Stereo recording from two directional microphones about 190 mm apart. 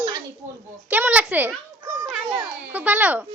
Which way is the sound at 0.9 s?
10° right (ahead or behind).